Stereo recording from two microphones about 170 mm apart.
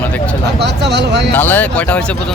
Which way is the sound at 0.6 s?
90° right.